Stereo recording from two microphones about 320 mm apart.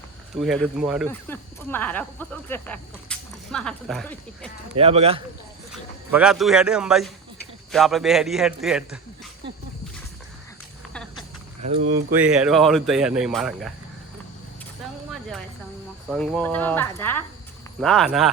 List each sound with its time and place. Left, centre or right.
0.3 s speech: centre
4.8 s speech: centre
6.1 s speech: centre
11.6 s speech: right
12.2 s speech: centre
15.1 s a sound: centre
16.0 s speech: centre